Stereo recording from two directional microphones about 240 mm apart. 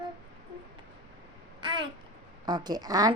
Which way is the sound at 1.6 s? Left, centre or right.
Centre.